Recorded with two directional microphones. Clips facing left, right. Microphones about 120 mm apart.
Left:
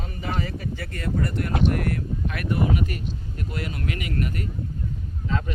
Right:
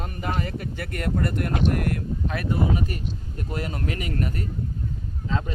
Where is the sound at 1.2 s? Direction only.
50° right (ahead or behind).